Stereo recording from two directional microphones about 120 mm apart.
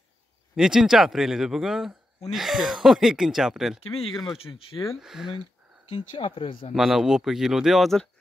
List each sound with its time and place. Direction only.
0.6 s speech: 5° right (ahead or behind)
4.4 s speech: 50° left (ahead or behind)
5.0 s speech: 5° right (ahead or behind)
5.9 s speech: 45° left (ahead or behind)
6.7 s speech: centre (ahead or behind)